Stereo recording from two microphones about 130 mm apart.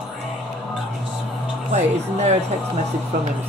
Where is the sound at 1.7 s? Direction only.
60° right (ahead or behind).